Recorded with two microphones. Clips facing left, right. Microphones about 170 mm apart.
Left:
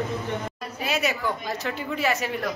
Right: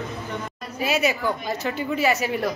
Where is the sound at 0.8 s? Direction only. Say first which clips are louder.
Right 4 dB; centre (ahead or behind).